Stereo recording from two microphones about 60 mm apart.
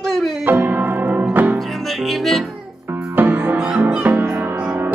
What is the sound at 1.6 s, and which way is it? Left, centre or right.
Music, centre.